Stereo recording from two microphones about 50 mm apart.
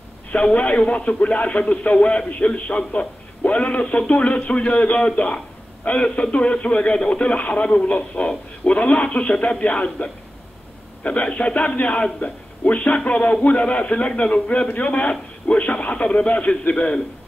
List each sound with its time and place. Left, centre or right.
0.3 s a man's voice: left